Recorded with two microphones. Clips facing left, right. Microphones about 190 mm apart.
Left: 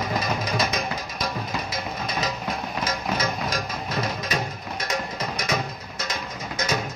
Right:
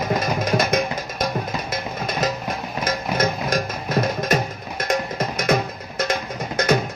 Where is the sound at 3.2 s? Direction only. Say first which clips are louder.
Right 5 dB; 50° right (ahead or behind).